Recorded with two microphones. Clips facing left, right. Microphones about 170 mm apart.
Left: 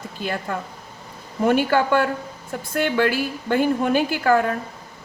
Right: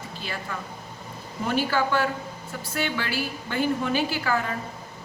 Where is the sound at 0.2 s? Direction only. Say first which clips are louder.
Left 8 dB; 50° left (ahead or behind).